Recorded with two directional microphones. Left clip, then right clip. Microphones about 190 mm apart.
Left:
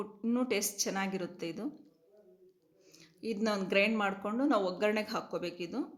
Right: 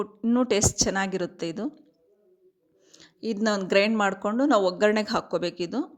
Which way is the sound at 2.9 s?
45° right (ahead or behind).